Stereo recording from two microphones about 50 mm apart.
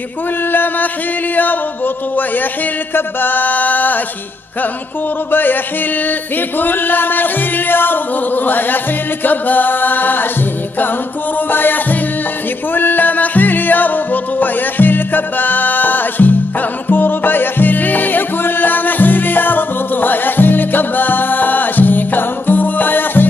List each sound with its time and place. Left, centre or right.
0.5 s music: left
2.9 s music: left
5.3 s music: left
6.6 s music: left
11.3 s music: left